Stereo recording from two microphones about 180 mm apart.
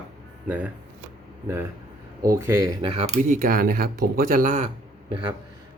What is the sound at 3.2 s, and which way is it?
Speech, 50° right (ahead or behind).